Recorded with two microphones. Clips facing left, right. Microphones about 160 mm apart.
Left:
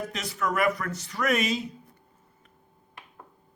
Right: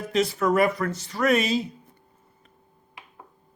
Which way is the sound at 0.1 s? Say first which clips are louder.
Right 8 dB; 30° right (ahead or behind).